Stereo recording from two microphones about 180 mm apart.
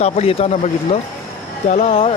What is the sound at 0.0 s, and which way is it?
Speech, 35° left (ahead or behind).